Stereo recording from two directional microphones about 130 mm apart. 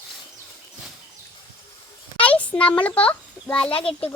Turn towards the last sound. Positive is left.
turn(degrees=45)  # may be behind; listen again after turning